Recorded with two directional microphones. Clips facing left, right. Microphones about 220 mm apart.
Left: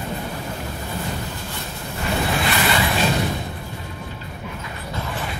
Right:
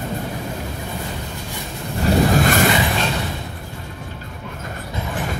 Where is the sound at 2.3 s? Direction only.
45° right (ahead or behind).